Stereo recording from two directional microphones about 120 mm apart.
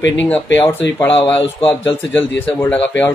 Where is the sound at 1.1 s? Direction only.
50° left (ahead or behind).